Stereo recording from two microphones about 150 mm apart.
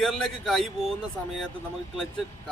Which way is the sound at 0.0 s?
Centre (ahead or behind).